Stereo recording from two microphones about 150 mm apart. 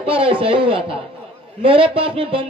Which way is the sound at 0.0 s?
40° right (ahead or behind).